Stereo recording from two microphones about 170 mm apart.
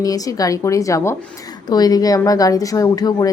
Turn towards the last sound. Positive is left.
turn(degrees=20)  # may be behind; listen again after turning